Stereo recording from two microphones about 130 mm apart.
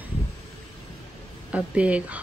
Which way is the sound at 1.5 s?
10° right (ahead or behind).